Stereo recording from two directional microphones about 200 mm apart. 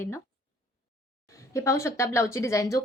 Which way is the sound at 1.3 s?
15° left (ahead or behind).